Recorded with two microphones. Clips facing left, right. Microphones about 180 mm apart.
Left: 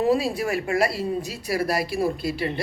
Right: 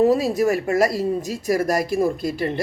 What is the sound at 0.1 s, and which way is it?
Speech, 40° right (ahead or behind).